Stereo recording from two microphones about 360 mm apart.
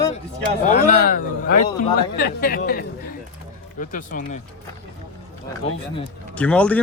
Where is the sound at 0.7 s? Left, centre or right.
Left.